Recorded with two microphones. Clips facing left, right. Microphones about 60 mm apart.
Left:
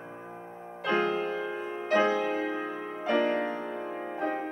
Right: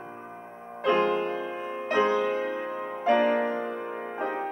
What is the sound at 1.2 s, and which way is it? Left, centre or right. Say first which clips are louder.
Music: right 2 dB; right.